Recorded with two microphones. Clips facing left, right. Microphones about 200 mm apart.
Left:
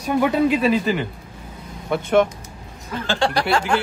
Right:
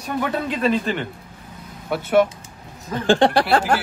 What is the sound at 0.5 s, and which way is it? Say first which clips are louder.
Speech: left 2 dB; 5° left (ahead or behind).